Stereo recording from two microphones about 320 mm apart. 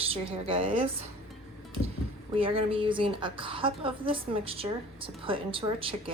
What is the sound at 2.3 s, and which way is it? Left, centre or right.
A woman's voice, centre.